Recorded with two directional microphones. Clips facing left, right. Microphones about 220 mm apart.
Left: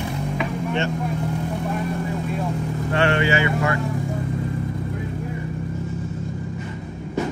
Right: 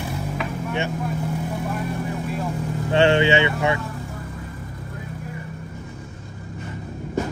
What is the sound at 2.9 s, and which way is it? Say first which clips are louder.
Speech: right 4 dB; 25° right (ahead or behind).